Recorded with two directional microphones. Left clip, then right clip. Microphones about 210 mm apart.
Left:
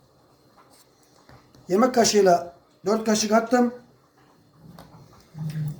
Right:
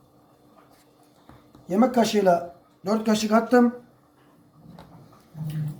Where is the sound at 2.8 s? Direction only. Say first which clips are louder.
Left 2 dB; 10° left (ahead or behind).